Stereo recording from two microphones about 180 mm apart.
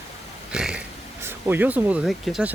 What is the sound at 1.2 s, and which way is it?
Speech, 10° right (ahead or behind).